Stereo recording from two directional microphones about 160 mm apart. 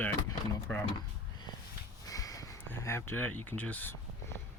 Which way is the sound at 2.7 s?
15° left (ahead or behind).